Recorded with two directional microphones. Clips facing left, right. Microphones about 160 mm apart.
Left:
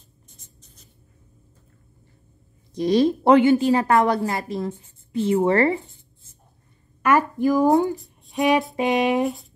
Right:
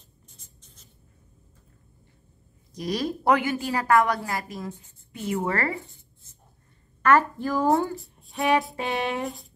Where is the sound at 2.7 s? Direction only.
25° left (ahead or behind).